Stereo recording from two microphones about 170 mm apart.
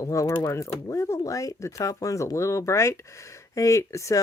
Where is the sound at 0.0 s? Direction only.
20° left (ahead or behind).